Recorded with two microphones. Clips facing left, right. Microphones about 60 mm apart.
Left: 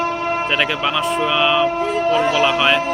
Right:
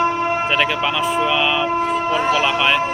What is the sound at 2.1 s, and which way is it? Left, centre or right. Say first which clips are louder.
Speech: left 1 dB; right.